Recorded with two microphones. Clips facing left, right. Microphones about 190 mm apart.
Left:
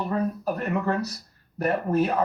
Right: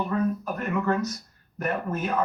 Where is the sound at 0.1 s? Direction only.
35° left (ahead or behind).